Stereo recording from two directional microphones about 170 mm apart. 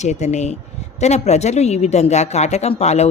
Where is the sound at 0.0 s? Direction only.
40° left (ahead or behind).